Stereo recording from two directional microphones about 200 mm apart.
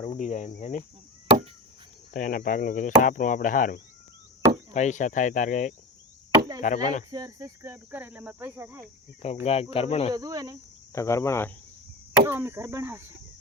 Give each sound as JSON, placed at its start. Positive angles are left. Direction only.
{"t": 0.0, "sound": "speech", "side_deg": 35}
{"t": 2.1, "sound": "speech", "side_deg": 40}
{"t": 7.1, "sound": "speech", "side_deg": -20}
{"t": 9.2, "sound": "speech", "side_deg": 30}
{"t": 10.2, "sound": "speech", "side_deg": -20}
{"t": 10.9, "sound": "speech", "side_deg": 15}
{"t": 12.2, "sound": "speech", "side_deg": -10}